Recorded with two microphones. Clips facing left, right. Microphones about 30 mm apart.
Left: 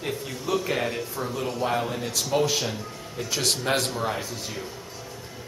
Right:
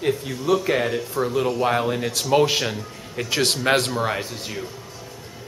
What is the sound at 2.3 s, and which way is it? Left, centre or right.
Speech, right.